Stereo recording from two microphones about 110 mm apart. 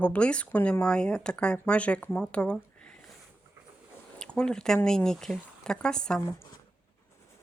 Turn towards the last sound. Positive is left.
turn(degrees=5)  # may be behind; listen again after turning